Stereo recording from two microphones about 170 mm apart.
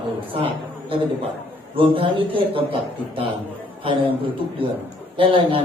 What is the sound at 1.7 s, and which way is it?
A man's voice, 30° right (ahead or behind).